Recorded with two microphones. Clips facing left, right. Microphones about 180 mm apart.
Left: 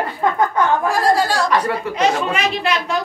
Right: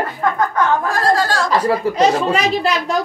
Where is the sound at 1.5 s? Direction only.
35° right (ahead or behind).